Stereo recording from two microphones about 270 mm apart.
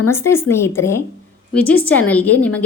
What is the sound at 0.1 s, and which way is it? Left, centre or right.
A woman's voice, centre.